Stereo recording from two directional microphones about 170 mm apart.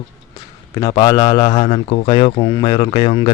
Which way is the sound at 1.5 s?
35° left (ahead or behind).